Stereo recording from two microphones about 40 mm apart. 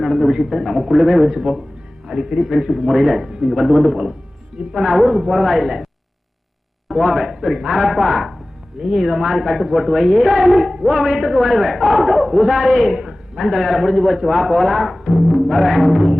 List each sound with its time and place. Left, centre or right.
0.0 s a man's voice: centre
3.3 s speech: centre
3.6 s a man's voice: centre
10.7 s a man's voice: centre